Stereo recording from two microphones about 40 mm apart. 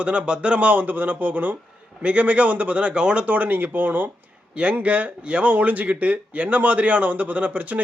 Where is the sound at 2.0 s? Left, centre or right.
Right.